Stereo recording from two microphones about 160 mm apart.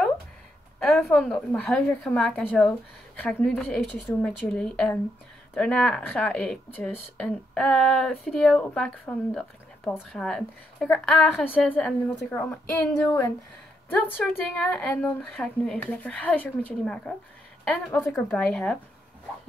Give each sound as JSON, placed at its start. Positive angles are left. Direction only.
{"t": 0.8, "sound": "speech", "side_deg": 5}